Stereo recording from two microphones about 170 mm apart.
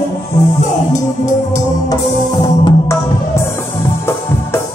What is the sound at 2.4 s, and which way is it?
Music, 20° left (ahead or behind).